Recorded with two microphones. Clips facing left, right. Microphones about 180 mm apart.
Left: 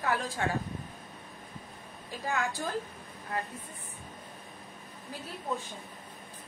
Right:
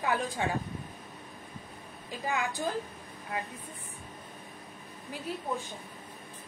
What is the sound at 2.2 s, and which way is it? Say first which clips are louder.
Speech: right 1 dB; 15° right (ahead or behind).